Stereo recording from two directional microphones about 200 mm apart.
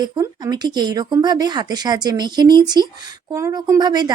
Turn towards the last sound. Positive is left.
turn(degrees=-20)  # may be behind; listen again after turning